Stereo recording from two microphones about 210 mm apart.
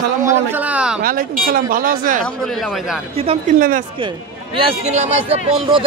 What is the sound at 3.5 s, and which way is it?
Speech, 40° right (ahead or behind).